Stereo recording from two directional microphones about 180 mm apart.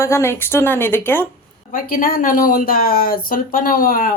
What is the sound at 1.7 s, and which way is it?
Speech, 50° left (ahead or behind).